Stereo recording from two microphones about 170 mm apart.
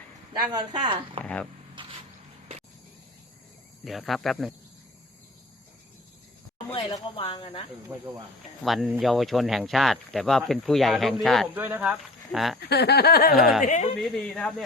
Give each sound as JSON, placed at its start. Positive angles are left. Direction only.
{"t": 0.3, "sound": "speech", "side_deg": -25}
{"t": 1.2, "sound": "speech", "side_deg": 5}
{"t": 3.8, "sound": "speech", "side_deg": 0}
{"t": 6.7, "sound": "speech", "side_deg": 30}
{"t": 7.9, "sound": "cricket", "side_deg": -15}
{"t": 8.6, "sound": "speech", "side_deg": 0}
{"t": 11.5, "sound": "speech", "side_deg": -10}
{"t": 12.5, "sound": "a sound", "side_deg": 75}
{"t": 13.3, "sound": "speech", "side_deg": 0}
{"t": 13.6, "sound": "speech", "side_deg": 45}
{"t": 14.0, "sound": "speech", "side_deg": 0}